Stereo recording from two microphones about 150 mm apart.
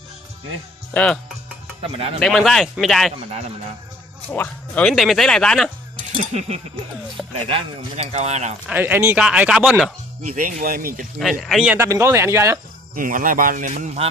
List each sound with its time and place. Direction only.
0.9 s speech: 5° left (ahead or behind)
1.8 s speech: 40° right (ahead or behind)
2.2 s speech: 5° left (ahead or behind)
4.3 s speech: 10° left (ahead or behind)
7.3 s speech: 40° right (ahead or behind)
8.6 s speech: 10° right (ahead or behind)
10.2 s speech: 65° right (ahead or behind)
11.2 s speech: centre (ahead or behind)
11.8 s speech: 20° right (ahead or behind)
12.9 s speech: 65° right (ahead or behind)